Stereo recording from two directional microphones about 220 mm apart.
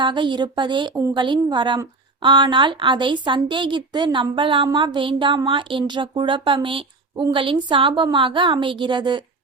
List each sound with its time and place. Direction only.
0.0 s a woman's voice: 20° right (ahead or behind)